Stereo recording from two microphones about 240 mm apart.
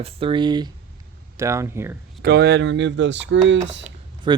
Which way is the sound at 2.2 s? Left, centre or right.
Right.